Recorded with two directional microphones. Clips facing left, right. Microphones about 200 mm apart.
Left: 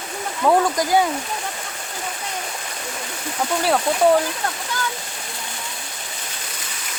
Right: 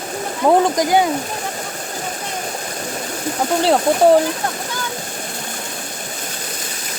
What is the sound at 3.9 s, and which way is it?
Speech, 50° right (ahead or behind).